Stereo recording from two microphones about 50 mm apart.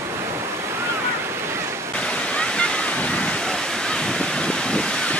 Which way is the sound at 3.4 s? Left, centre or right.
Centre.